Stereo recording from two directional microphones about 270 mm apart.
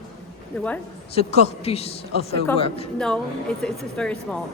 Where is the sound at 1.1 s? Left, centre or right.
Left.